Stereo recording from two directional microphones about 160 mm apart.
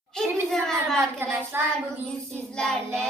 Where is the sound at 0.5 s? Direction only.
Centre (ahead or behind).